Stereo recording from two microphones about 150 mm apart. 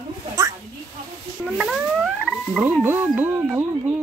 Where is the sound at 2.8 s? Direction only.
15° right (ahead or behind).